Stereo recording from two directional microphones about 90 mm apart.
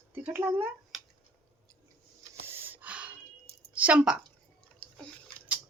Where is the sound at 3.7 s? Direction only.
15° right (ahead or behind).